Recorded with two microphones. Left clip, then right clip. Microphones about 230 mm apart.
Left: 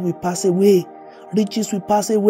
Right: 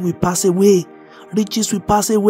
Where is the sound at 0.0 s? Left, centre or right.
Right.